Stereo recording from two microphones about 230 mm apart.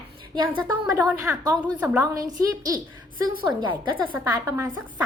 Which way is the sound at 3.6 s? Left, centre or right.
Right.